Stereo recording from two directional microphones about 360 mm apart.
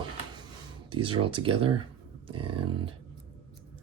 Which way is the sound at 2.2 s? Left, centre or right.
Centre.